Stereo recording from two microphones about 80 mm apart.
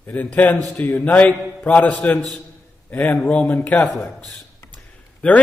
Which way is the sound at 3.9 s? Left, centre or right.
Centre.